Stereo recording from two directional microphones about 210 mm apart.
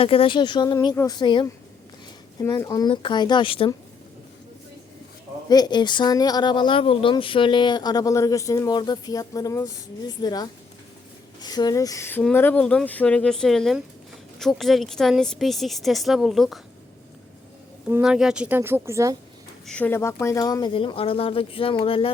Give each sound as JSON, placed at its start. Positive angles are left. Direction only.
{"t": 0.0, "sound": "speech", "side_deg": 25}
{"t": 5.5, "sound": "speech", "side_deg": 20}
{"t": 17.8, "sound": "a woman's voice", "side_deg": -5}
{"t": 19.6, "sound": "speech", "side_deg": 5}